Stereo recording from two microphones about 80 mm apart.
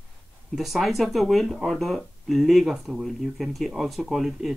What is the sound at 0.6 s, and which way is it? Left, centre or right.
Speech, centre.